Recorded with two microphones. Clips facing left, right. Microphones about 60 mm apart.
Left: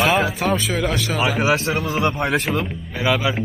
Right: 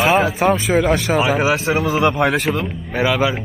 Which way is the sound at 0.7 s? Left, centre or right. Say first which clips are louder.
Right 7 dB; right.